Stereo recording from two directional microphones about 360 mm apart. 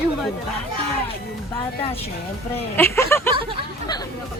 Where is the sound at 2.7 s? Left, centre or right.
Centre.